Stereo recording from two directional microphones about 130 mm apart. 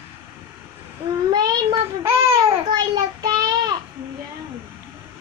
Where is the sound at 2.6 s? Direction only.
35° right (ahead or behind).